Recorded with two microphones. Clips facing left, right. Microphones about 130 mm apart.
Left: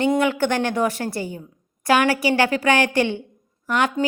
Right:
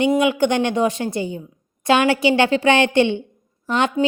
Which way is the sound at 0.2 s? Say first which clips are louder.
Right 3 dB; 15° right (ahead or behind).